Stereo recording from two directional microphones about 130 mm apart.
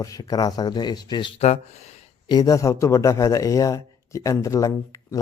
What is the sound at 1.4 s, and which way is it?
Speech, 60° left (ahead or behind).